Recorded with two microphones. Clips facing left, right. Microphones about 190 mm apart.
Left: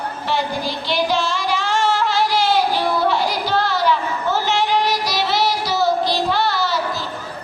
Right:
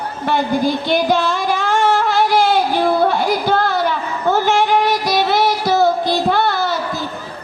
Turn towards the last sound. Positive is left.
turn(degrees=-50)  # may be behind; listen again after turning